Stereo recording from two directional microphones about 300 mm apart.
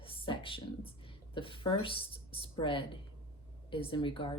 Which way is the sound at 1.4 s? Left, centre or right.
Centre.